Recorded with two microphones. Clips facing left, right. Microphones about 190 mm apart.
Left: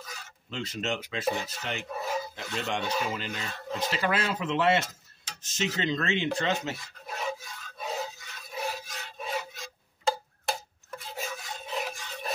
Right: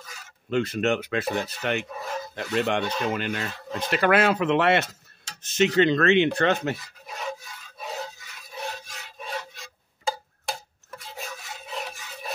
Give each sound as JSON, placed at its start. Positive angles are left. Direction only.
{"t": 0.5, "sound": "speech", "side_deg": -55}
{"t": 2.0, "sound": "chicken", "side_deg": 5}
{"t": 2.3, "sound": "speech", "side_deg": -60}
{"t": 2.8, "sound": "speech", "side_deg": 5}
{"t": 3.1, "sound": "speech", "side_deg": -65}
{"t": 7.1, "sound": "filing", "side_deg": 5}
{"t": 7.8, "sound": "a sound", "side_deg": 5}
{"t": 11.0, "sound": "filing", "side_deg": 0}